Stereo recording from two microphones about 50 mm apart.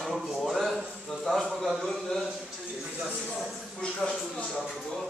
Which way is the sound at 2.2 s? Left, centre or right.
Centre.